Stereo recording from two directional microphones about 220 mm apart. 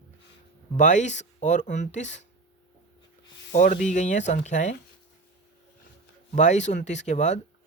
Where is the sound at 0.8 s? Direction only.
35° left (ahead or behind).